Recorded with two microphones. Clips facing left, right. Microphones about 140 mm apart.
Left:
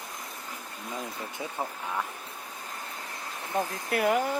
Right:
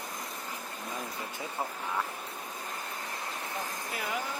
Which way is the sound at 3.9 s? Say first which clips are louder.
Left 12 dB; 60° left (ahead or behind).